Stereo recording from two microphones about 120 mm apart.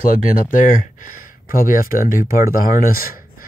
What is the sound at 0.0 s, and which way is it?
Speech, 90° left.